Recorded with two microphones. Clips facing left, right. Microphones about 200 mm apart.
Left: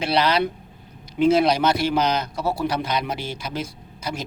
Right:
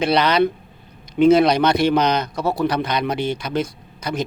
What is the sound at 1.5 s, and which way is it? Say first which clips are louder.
Speech: right 4 dB; 5° left (ahead or behind).